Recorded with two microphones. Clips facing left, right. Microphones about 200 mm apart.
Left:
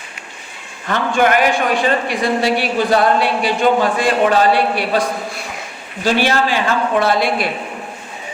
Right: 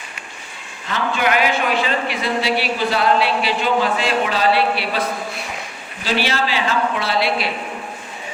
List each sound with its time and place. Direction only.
0.9 s a man's voice: 50° left (ahead or behind)
6.1 s a man's voice: 50° left (ahead or behind)